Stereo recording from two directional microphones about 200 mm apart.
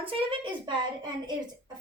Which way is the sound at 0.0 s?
25° right (ahead or behind).